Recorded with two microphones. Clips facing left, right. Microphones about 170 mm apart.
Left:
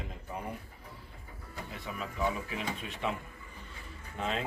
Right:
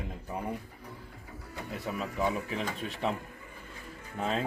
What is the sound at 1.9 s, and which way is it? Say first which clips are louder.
Speech: right 6 dB; 35° right (ahead or behind).